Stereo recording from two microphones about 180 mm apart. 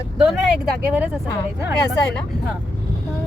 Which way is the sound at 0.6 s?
5° right (ahead or behind).